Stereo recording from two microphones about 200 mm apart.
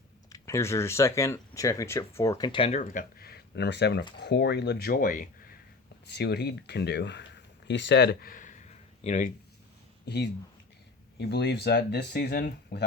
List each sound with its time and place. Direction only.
0.3 s speech: 15° left (ahead or behind); by 5.2 s 45° left (ahead or behind)
6.1 s speech: 55° left (ahead or behind); by 9.3 s 40° left (ahead or behind)
10.1 s speech: 55° left (ahead or behind)